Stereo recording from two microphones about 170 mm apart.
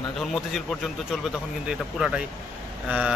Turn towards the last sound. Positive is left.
turn(degrees=-5)  # may be behind; listen again after turning